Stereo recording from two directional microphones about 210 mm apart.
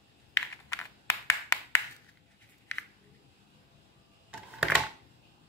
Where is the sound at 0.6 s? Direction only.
15° left (ahead or behind).